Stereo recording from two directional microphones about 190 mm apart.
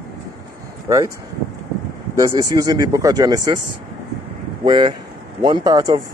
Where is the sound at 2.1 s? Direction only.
20° right (ahead or behind).